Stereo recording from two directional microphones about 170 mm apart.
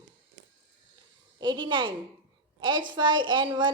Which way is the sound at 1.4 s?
25° right (ahead or behind).